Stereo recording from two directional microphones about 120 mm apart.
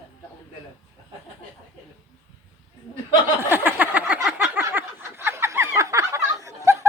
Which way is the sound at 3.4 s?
15° right (ahead or behind).